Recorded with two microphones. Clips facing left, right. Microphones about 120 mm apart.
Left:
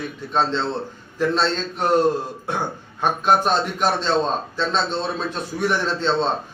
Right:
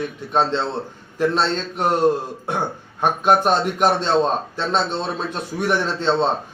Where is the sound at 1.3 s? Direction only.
15° right (ahead or behind).